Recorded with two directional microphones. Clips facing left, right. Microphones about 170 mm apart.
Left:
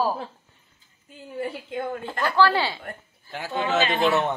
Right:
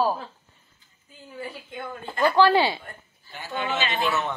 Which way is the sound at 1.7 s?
45° left (ahead or behind).